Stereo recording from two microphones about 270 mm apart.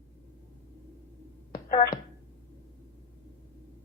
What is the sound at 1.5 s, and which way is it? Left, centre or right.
Finger snapping, left.